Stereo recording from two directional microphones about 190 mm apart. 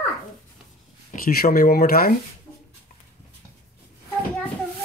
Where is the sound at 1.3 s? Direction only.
55° left (ahead or behind).